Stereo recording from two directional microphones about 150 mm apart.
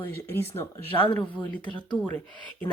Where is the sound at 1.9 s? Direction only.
10° right (ahead or behind).